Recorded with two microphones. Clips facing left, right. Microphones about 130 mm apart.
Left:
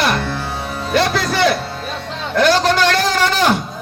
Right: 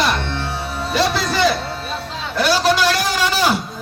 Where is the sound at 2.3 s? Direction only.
10° right (ahead or behind).